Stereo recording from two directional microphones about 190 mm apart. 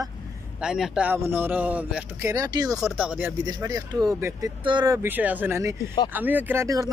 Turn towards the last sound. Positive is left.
turn(degrees=-15)  # may be behind; listen again after turning